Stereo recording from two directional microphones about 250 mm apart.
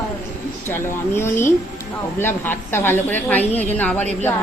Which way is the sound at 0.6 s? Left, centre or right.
Centre.